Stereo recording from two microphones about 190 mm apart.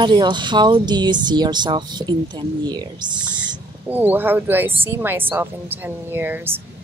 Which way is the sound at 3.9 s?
10° right (ahead or behind).